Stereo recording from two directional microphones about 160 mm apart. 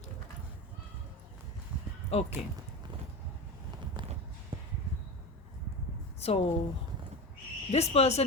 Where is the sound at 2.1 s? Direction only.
40° left (ahead or behind).